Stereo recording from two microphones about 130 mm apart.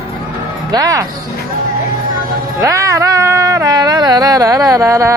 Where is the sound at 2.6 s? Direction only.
25° right (ahead or behind).